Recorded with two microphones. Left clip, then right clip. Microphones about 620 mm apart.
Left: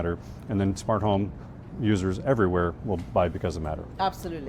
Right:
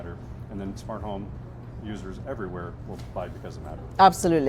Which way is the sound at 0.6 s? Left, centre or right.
Left.